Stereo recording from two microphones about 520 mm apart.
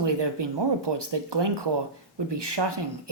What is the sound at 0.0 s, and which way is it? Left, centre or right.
Speech, right.